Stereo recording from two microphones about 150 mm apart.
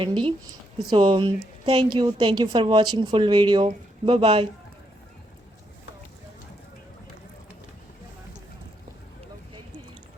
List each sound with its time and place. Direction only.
0.3 s a woman's voice: 35° right (ahead or behind)